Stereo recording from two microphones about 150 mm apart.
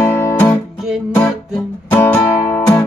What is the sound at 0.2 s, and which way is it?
Guitar, 15° left (ahead or behind).